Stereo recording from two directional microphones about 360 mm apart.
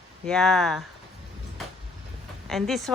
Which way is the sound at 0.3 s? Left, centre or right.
Centre.